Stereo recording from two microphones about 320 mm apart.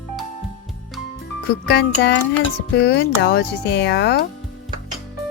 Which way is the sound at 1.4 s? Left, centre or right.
Left.